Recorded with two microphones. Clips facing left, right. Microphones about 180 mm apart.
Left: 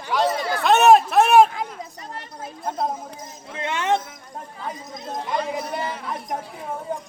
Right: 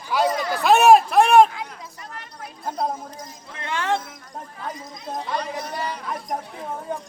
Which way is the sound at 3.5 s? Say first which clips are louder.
Left 2 dB; 20° left (ahead or behind).